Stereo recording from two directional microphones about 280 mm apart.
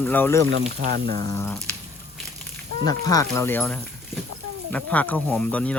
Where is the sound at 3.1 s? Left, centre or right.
Centre.